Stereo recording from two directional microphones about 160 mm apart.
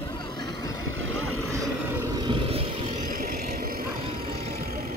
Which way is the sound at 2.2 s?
30° right (ahead or behind).